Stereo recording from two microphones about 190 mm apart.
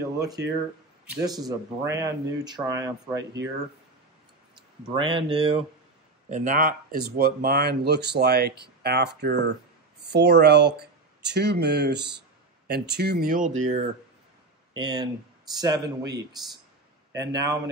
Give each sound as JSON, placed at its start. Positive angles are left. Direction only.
{"t": 1.2, "sound": "speech", "side_deg": -20}
{"t": 4.8, "sound": "speech", "side_deg": -25}
{"t": 14.7, "sound": "speech", "side_deg": -25}